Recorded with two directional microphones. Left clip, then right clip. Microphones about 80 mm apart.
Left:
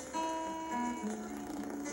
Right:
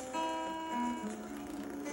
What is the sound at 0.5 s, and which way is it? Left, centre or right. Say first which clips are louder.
Music: even; right.